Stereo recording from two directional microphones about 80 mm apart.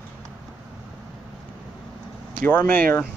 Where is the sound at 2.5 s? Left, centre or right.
Left.